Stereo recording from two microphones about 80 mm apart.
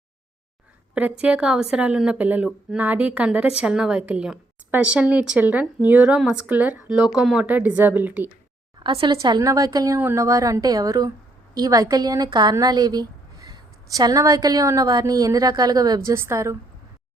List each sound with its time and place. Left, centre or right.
0.9 s a woman's voice: centre
7.2 s speech: centre
7.4 s a woman's voice: right
8.8 s a woman's voice: right
9.4 s a woman's voice: right
9.9 s a woman's voice: right
10.2 s a woman's voice: right
16.1 s a woman's voice: right